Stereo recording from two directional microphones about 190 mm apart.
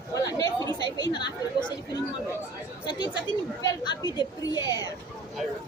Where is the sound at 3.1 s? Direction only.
65° left (ahead or behind).